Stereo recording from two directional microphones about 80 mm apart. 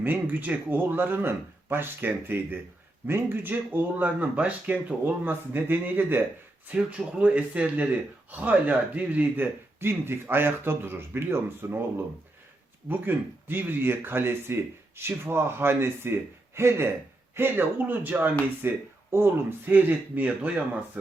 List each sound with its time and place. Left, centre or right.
0.0 s speech: right